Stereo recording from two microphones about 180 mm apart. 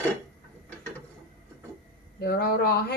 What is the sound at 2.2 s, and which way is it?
Speech, 60° left (ahead or behind).